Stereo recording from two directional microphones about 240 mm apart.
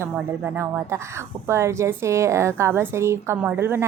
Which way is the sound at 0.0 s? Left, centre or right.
Centre.